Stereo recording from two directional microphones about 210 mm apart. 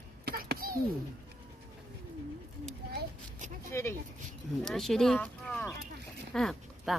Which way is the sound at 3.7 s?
10° left (ahead or behind).